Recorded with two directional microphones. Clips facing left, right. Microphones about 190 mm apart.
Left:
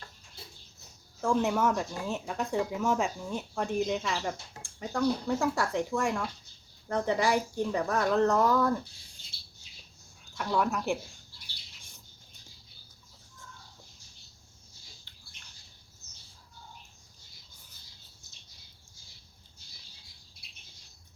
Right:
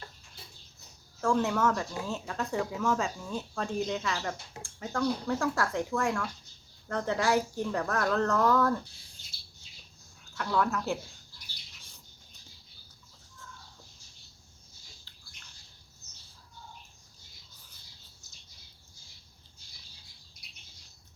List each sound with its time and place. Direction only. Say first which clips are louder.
1.2 s speech: even; 15° left (ahead or behind)
10.3 s speech: even; 15° left (ahead or behind)